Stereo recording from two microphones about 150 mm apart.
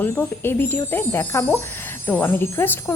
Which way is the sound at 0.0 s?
15° left (ahead or behind).